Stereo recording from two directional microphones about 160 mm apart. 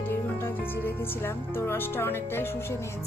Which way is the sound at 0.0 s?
15° left (ahead or behind).